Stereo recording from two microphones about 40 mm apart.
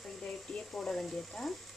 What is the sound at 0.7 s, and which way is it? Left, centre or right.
Speech, centre.